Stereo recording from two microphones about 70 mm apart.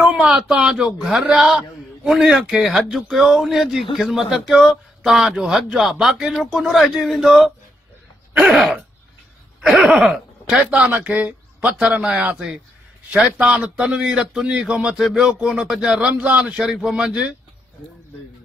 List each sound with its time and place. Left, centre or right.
0.0 s a man's voice: centre
10.7 s a man's voice: centre